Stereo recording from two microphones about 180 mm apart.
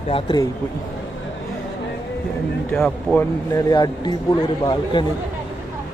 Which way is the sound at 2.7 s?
5° left (ahead or behind).